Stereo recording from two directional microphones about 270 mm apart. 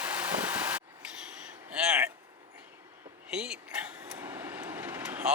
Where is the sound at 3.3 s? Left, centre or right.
Centre.